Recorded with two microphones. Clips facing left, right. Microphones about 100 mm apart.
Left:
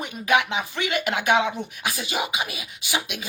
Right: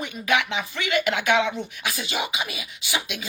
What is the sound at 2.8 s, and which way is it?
Speech, 15° left (ahead or behind).